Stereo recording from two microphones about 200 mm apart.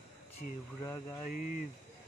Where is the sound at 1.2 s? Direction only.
40° left (ahead or behind).